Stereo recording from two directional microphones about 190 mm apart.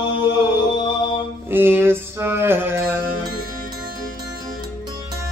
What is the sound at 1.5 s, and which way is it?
Music, 10° right (ahead or behind).